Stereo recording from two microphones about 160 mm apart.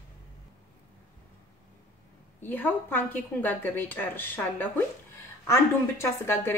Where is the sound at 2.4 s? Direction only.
10° left (ahead or behind).